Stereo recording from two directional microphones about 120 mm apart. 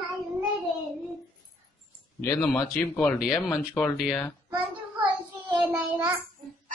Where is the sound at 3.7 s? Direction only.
5° left (ahead or behind).